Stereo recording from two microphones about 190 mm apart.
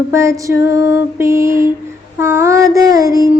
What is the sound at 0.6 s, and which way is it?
Music, 65° left (ahead or behind).